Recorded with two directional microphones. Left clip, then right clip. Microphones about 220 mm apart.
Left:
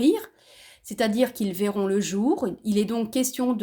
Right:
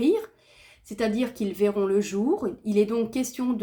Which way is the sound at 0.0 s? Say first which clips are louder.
Left 1 dB; 40° left (ahead or behind).